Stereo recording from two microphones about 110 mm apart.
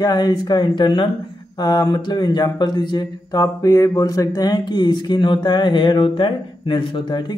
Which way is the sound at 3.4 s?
30° left (ahead or behind).